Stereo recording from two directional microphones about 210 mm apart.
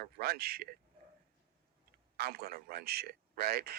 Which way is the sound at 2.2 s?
45° right (ahead or behind).